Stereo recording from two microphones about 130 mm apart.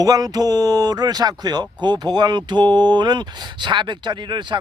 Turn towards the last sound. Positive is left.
turn(degrees=-35)  # may be behind; listen again after turning